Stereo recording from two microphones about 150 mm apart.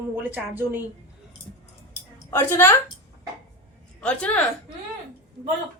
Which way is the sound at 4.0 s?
10° left (ahead or behind).